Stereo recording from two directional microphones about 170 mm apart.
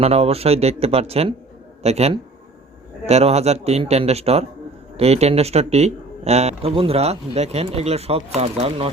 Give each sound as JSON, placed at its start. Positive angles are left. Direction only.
{"t": 0.0, "sound": "speech", "side_deg": -35}